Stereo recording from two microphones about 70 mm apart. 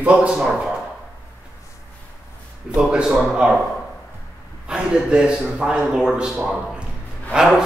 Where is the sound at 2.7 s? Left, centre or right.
Centre.